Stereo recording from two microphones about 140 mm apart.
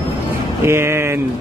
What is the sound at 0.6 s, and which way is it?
Speech, 20° right (ahead or behind).